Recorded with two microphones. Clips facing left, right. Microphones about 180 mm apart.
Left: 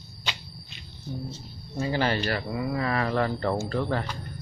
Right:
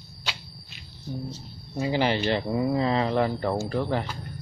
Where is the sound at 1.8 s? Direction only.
15° right (ahead or behind).